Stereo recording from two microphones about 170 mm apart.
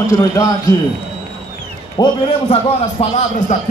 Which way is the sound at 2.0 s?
35° left (ahead or behind).